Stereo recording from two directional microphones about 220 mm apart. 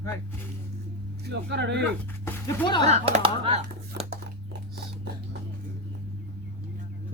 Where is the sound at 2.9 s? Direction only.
30° right (ahead or behind).